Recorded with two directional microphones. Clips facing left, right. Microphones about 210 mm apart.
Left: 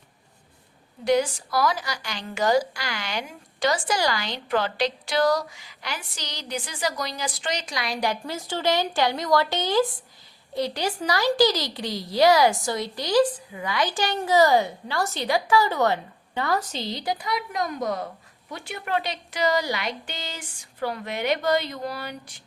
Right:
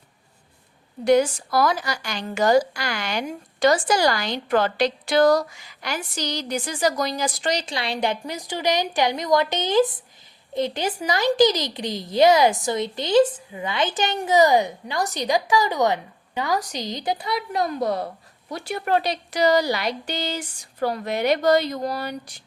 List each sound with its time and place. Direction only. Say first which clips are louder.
1.0 s a woman's voice: right 4 dB; 50° right (ahead or behind)